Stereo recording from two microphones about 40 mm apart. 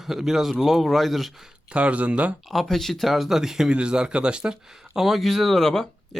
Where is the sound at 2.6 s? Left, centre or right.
Centre.